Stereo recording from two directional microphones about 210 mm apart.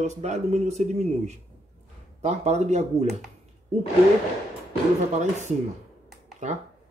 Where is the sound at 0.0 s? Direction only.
35° right (ahead or behind).